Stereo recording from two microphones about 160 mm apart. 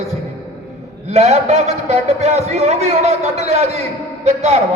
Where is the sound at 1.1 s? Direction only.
45° right (ahead or behind).